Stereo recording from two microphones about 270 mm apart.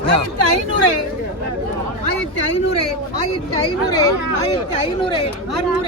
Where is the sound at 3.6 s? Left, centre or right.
Centre.